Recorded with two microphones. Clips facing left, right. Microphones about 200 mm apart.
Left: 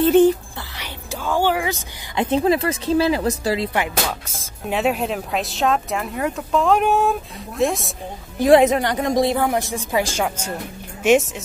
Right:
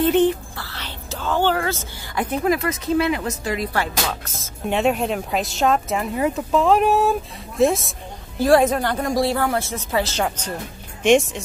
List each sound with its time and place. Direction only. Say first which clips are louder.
0.6 s a woman's voice: even; 15° left (ahead or behind)
8.4 s a woman's voice: left 2 dB; 20° left (ahead or behind)